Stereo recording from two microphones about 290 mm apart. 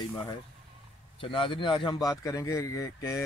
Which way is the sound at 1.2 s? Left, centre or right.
Centre.